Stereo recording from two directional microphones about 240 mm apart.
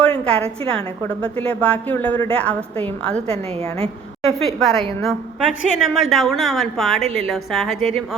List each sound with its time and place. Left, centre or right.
0.0 s a sound: centre
0.3 s a woman's voice: right
0.7 s a woman's voice: centre
3.2 s a woman's voice: right
4.4 s a woman's voice: centre